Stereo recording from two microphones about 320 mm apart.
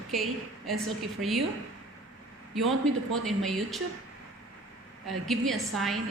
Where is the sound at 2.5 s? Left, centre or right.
Centre.